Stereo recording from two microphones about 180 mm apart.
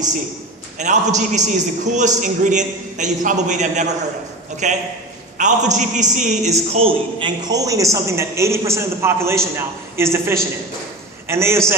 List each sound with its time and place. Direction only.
0.8 s a man's voice: 40° right (ahead or behind); by 11.6 s 15° right (ahead or behind)